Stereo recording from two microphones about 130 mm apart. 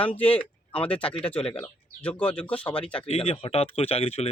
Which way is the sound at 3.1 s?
50° left (ahead or behind).